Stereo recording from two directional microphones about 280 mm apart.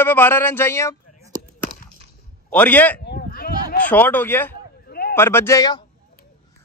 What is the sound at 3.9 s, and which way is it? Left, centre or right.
Speech, centre.